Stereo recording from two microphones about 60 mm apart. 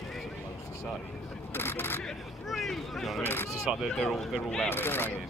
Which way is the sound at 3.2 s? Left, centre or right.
Left.